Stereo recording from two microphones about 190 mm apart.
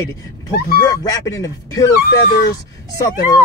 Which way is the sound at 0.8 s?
20° left (ahead or behind).